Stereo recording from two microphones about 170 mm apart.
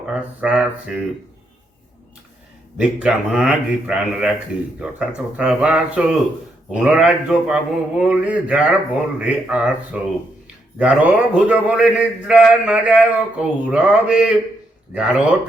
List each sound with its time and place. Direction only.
0.0 s speech: 5° right (ahead or behind)
2.7 s a man's voice: 5° right (ahead or behind)